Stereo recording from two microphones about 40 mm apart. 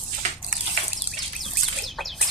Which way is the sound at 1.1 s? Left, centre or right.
Centre.